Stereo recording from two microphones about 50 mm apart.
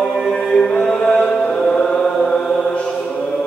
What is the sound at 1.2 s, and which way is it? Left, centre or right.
Music, centre.